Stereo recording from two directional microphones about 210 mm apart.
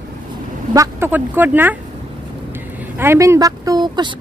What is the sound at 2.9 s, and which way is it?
Speech, 15° right (ahead or behind).